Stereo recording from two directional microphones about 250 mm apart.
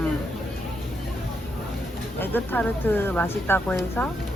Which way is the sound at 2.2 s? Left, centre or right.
Centre.